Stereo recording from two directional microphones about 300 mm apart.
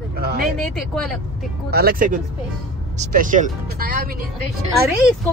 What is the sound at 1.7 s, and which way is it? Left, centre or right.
A woman's voice, right.